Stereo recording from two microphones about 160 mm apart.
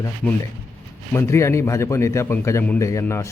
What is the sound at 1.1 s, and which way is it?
A man's voice, 15° left (ahead or behind).